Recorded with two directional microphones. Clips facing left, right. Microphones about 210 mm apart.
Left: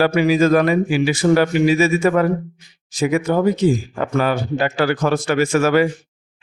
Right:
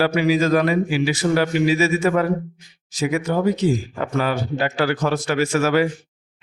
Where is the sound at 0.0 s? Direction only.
50° left (ahead or behind).